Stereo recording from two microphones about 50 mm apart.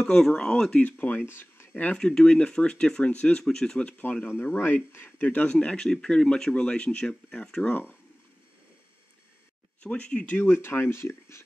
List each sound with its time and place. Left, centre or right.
0.0 s speech: centre
0.8 s speech: left
1.2 s speech: left
2.0 s speech: centre
3.4 s speech: centre
4.3 s speech: left
5.8 s speech: centre
7.6 s speech: left
9.8 s speech: left
10.2 s speech: left